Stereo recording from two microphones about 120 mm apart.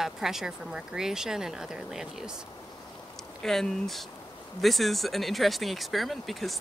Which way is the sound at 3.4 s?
5° left (ahead or behind).